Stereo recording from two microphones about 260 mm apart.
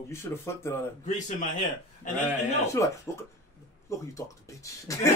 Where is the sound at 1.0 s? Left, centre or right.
Left.